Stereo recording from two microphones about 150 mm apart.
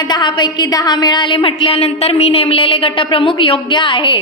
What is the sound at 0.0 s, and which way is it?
A woman's voice, 30° left (ahead or behind).